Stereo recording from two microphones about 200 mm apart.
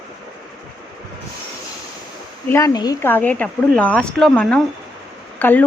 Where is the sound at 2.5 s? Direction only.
15° left (ahead or behind).